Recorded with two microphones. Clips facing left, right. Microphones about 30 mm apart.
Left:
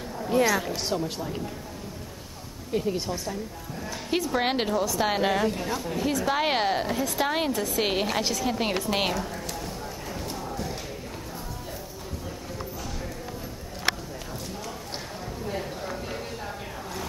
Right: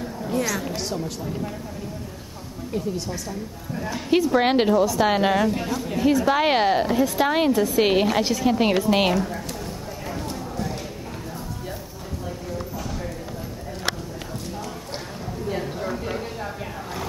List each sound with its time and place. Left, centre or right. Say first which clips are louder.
0.3 s speech: left 3 dB; centre
2.7 s speech: left 1 dB; centre
3.7 s a woman's voice: right 7 dB; centre
10.1 s clip-clop: right 3 dB; centre
15.4 s a sound: right 5 dB; centre